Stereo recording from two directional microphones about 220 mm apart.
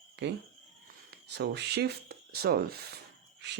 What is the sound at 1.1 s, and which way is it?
Speech, 50° right (ahead or behind).